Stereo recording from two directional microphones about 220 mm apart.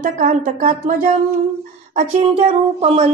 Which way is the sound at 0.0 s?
35° right (ahead or behind).